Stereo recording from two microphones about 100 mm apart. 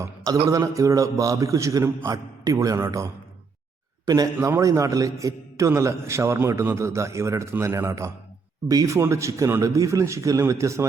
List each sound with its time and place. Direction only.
0.5 s speech: 35° right (ahead or behind)
4.4 s a man's voice: 30° right (ahead or behind)